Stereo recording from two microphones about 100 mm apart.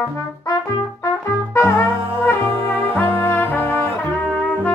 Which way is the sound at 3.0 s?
20° left (ahead or behind).